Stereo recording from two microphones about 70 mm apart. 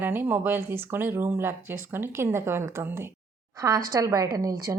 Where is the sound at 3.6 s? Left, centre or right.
Right.